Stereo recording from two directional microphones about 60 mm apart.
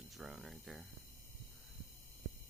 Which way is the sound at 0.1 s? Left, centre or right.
Centre.